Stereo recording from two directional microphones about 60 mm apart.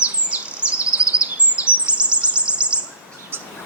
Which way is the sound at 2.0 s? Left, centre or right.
Centre.